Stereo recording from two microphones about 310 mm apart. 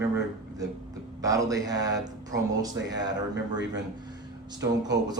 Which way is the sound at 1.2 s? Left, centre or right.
Centre.